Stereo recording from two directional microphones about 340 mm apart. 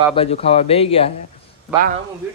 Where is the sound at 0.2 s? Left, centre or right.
Centre.